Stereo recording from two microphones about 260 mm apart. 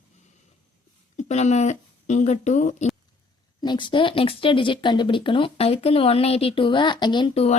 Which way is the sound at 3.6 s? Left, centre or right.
Centre.